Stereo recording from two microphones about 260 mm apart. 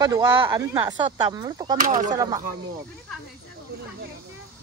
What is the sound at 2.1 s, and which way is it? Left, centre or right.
Speech, centre.